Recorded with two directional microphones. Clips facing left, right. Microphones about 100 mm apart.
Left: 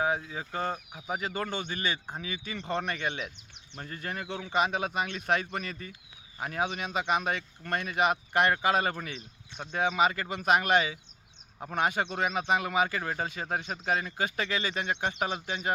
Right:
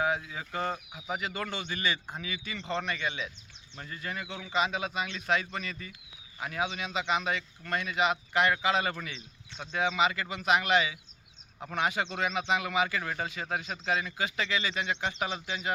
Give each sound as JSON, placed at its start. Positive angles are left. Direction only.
{"t": 0.0, "sound": "a man's voice", "side_deg": 30}
{"t": 1.5, "sound": "speech", "side_deg": 45}